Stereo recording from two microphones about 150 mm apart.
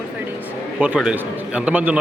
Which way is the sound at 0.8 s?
5° right (ahead or behind).